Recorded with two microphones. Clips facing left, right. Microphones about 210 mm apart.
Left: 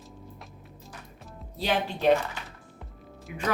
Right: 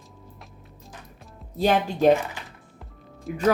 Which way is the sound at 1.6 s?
45° right (ahead or behind).